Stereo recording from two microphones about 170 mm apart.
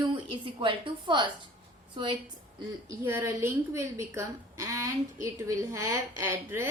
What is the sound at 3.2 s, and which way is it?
A woman's voice, 15° right (ahead or behind).